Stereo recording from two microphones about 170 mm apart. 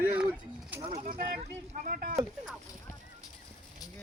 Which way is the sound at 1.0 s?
55° right (ahead or behind).